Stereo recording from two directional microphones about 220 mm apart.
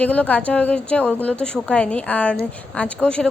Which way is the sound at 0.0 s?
5° left (ahead or behind).